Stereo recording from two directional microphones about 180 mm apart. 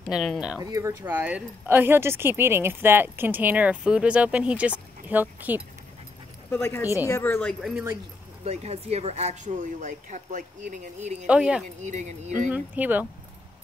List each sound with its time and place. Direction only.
0.0 s speech: centre (ahead or behind)
0.6 s speech: 20° right (ahead or behind)
6.5 s speech: 15° left (ahead or behind)
8.5 s speech: 35° right (ahead or behind)
11.2 s speech: 5° right (ahead or behind)
11.8 s speech: 40° right (ahead or behind)
12.4 s speech: 10° right (ahead or behind)